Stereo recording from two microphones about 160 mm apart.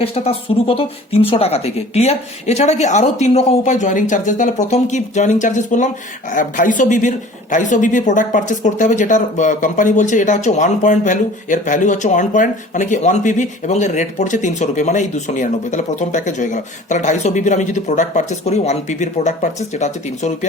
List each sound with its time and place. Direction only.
0.0 s speech: 35° left (ahead or behind)